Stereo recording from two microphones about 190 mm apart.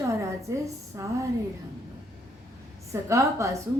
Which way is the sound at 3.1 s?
15° right (ahead or behind).